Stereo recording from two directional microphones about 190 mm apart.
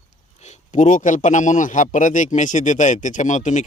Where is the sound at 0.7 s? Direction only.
40° left (ahead or behind).